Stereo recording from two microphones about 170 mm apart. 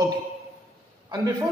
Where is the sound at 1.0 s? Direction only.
20° right (ahead or behind).